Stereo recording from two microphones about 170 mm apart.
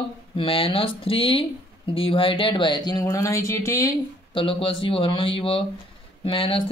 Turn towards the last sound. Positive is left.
turn(degrees=35)  # may be behind; listen again after turning